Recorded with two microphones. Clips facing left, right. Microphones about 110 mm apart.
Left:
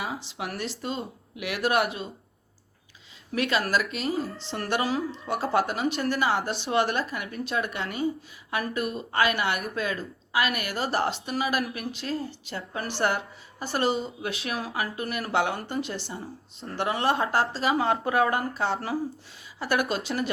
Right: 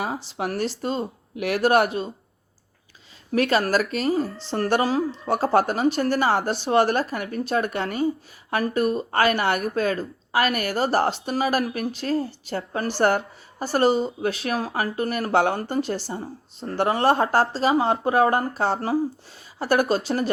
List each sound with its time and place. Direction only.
0.0 s speech: 40° right (ahead or behind)
3.3 s a woman's voice: 40° right (ahead or behind)